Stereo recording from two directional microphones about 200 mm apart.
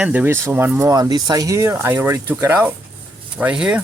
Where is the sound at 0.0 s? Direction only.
5° right (ahead or behind).